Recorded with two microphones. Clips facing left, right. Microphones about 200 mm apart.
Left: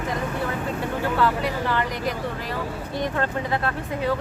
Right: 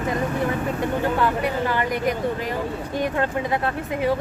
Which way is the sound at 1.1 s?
15° right (ahead or behind).